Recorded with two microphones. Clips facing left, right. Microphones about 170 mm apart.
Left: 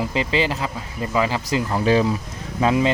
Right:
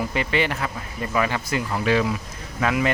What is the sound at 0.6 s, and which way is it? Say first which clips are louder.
Speech: left 2 dB; 20° left (ahead or behind).